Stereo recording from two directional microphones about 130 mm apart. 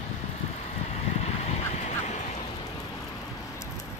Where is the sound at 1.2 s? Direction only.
55° left (ahead or behind).